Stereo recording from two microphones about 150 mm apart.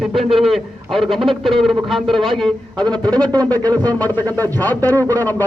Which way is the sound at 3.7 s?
25° right (ahead or behind).